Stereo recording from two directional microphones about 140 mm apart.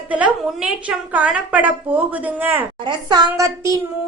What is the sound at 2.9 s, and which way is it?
Speech, 30° right (ahead or behind).